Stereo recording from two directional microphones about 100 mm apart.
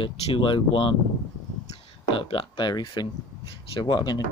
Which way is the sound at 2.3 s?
65° left (ahead or behind).